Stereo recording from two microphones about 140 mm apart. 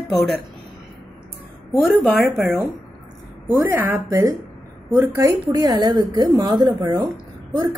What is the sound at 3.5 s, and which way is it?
A woman's voice, 20° right (ahead or behind).